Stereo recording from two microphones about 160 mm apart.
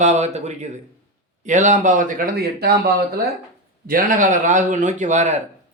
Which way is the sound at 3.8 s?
60° right (ahead or behind).